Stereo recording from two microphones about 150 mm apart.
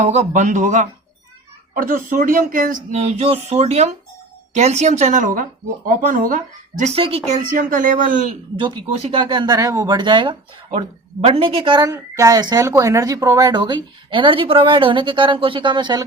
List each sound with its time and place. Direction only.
0.0 s speech: 50° right (ahead or behind)
1.7 s speech: 70° right (ahead or behind)
2.9 s speech: 45° right (ahead or behind); by 6.9 s 60° right (ahead or behind)
6.9 s speech: 40° right (ahead or behind); by 8.3 s 60° right (ahead or behind)
8.5 s speech: 30° right (ahead or behind)
11.9 s speech: 20° right (ahead or behind)